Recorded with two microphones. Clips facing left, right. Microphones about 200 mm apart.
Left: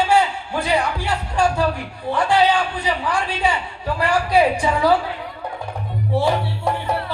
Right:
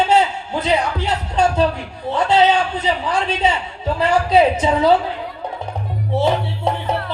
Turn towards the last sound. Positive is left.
turn(degrees=-20)  # may be behind; listen again after turning